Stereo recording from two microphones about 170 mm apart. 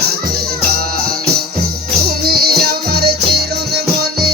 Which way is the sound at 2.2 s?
65° right (ahead or behind).